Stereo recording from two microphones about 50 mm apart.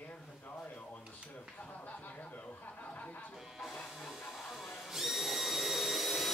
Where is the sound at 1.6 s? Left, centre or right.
Left.